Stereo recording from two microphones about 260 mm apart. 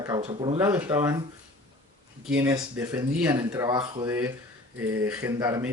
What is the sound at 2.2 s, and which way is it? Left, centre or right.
A man's voice, centre.